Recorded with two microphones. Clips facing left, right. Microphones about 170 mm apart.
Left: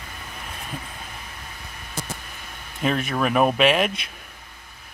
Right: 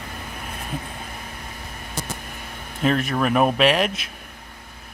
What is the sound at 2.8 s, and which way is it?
Speech, centre (ahead or behind).